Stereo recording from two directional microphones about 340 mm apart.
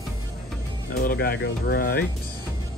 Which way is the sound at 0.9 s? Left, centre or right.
Left.